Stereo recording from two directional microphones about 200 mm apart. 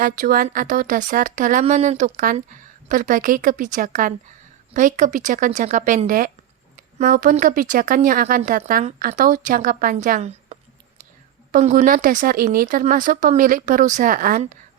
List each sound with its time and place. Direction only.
0.0 s a woman's voice: 45° right (ahead or behind)